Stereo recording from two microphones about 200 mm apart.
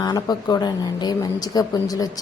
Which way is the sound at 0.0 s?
20° left (ahead or behind).